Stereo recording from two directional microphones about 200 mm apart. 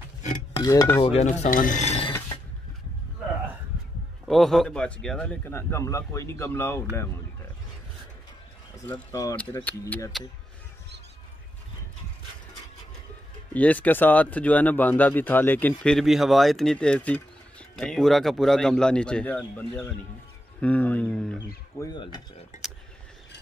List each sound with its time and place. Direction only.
0.6 s speech: 15° left (ahead or behind)
1.0 s speech: 35° left (ahead or behind)
4.3 s speech: centre (ahead or behind)
8.7 s speech: 10° left (ahead or behind)
13.5 s speech: 10° left (ahead or behind)
21.7 s mechanisms: 20° left (ahead or behind)
22.5 s a sound: 35° left (ahead or behind)